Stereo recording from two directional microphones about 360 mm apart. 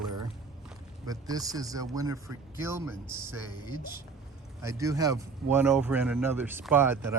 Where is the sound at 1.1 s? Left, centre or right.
Centre.